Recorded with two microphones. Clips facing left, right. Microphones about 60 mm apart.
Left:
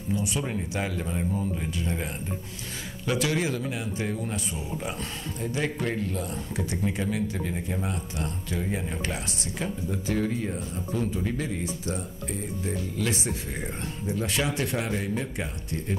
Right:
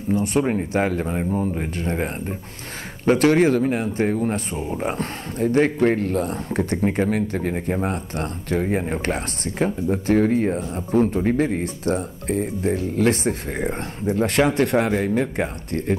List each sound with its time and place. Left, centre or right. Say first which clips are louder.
0.1 s speech: right 9 dB; right